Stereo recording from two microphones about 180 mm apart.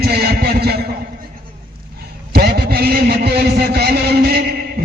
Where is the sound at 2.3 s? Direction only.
60° right (ahead or behind).